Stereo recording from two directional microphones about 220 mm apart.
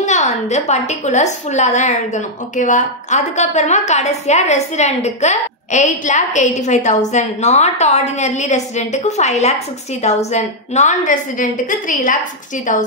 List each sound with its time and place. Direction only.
0.0 s a woman's voice: 35° left (ahead or behind)